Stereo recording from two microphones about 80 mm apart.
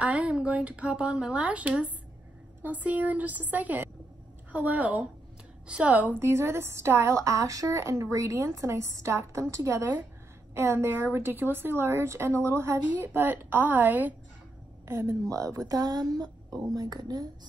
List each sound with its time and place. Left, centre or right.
0.0 s a woman's voice: centre
6.2 s a woman's voice: right
7.2 s a woman's voice: right
14.9 s a woman's voice: right